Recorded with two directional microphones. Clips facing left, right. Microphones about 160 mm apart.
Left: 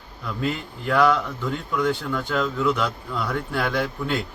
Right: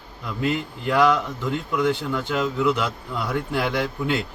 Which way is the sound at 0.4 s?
15° right (ahead or behind).